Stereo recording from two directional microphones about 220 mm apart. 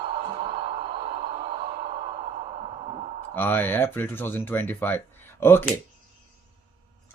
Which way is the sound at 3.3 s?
10° left (ahead or behind).